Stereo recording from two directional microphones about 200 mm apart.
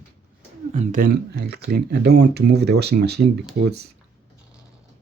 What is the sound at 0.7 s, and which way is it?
Speech, 40° right (ahead or behind).